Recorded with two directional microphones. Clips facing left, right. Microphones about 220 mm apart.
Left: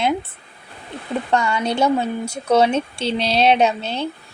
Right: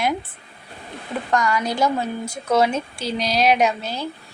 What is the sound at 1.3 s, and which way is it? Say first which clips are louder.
Speech: left 1 dB; 25° left (ahead or behind).